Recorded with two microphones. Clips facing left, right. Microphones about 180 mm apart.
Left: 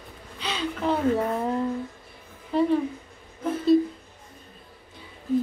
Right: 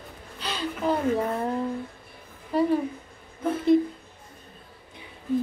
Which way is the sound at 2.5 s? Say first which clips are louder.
Left 1 dB; 5° right (ahead or behind).